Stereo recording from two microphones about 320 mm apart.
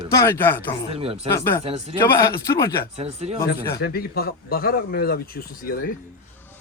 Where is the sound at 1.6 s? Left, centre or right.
Centre.